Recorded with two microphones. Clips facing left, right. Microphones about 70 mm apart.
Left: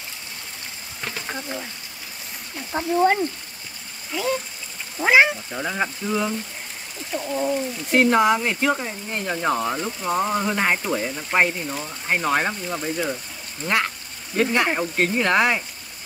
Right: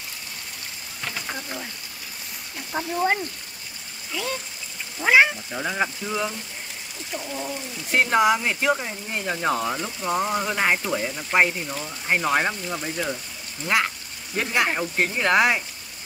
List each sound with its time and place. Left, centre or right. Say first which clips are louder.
1.1 s a sound: left 3 dB; left
2.7 s speech: left 2 dB; centre
5.0 s speech: left 1 dB; centre
7.2 s speech: left 6 dB; left
7.4 s speech: left 8 dB; centre
13.7 s a sound: even; centre
15.0 s speech: even; centre